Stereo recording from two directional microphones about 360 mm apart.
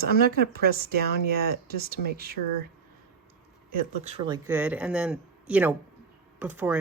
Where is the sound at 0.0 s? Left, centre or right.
Right.